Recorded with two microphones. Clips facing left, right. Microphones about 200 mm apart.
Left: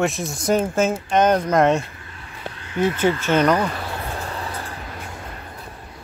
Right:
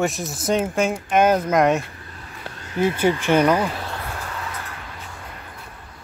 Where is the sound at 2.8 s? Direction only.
10° right (ahead or behind).